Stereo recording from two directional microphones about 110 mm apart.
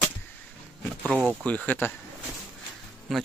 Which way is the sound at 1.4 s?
15° left (ahead or behind).